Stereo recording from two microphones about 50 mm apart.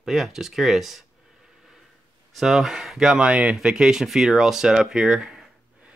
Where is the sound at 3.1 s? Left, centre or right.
Right.